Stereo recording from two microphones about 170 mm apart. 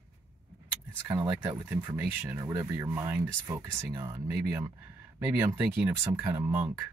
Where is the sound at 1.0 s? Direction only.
15° right (ahead or behind).